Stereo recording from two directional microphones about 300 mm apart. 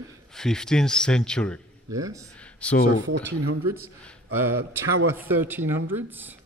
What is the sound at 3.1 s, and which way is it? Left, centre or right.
Speech, right.